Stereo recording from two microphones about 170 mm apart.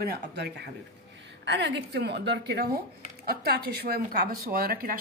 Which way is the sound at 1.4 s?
90° right.